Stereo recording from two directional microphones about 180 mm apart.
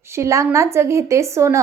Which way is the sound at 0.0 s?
15° right (ahead or behind).